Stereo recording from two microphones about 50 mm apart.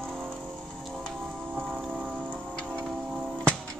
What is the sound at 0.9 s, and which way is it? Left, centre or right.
Music, centre.